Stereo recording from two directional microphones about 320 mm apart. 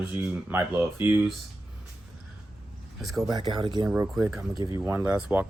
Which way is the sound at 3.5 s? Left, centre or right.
Centre.